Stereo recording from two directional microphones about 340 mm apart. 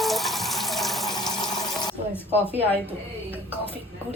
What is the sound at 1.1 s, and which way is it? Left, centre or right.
Sewing machine, centre.